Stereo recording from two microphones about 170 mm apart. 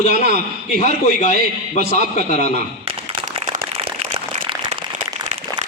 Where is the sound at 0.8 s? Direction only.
45° left (ahead or behind).